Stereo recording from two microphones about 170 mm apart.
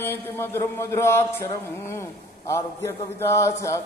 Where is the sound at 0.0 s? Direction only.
15° left (ahead or behind).